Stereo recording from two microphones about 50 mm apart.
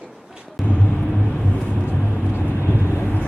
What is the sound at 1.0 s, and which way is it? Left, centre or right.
Vehicle, centre.